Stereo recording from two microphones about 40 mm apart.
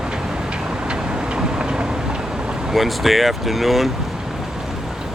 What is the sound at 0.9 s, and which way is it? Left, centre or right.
Vehicle, right.